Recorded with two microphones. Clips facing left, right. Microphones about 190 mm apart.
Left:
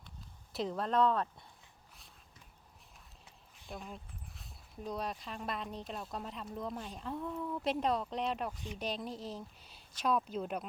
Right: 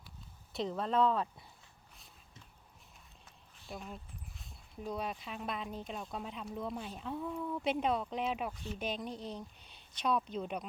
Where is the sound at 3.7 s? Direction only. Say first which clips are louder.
Even; centre (ahead or behind).